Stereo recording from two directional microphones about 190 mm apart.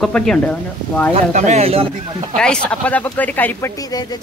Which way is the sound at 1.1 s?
40° right (ahead or behind).